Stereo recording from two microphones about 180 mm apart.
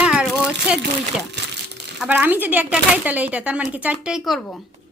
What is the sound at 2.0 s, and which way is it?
Speech, 10° right (ahead or behind).